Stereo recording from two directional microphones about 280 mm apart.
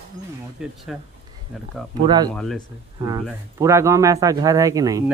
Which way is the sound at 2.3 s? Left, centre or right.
Centre.